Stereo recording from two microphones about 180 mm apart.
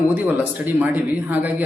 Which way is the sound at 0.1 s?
10° right (ahead or behind).